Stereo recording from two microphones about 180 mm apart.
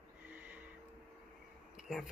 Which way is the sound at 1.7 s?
Centre (ahead or behind).